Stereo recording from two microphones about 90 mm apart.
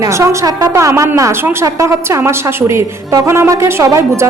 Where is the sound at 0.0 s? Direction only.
35° right (ahead or behind).